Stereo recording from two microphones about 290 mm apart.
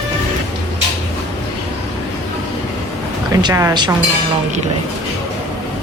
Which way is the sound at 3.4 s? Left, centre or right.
Centre.